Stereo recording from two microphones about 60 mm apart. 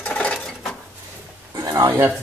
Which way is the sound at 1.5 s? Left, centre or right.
Right.